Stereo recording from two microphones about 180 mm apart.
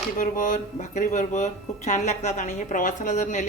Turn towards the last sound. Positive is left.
turn(degrees=45)  # may be behind; listen again after turning